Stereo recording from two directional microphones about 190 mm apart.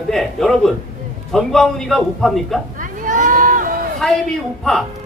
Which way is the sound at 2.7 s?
45° right (ahead or behind).